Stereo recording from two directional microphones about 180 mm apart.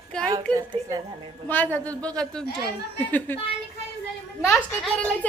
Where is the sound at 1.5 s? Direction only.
10° left (ahead or behind).